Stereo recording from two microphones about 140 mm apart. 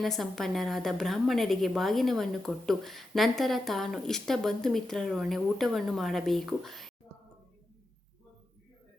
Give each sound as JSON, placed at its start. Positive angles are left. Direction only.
{"t": 0.0, "sound": "a woman's voice", "side_deg": 0}